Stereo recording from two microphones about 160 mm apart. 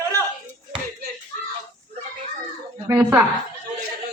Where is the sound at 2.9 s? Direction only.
20° right (ahead or behind).